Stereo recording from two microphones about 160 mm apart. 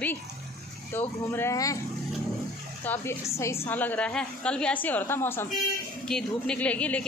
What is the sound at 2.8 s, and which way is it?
A woman's voice, 10° left (ahead or behind).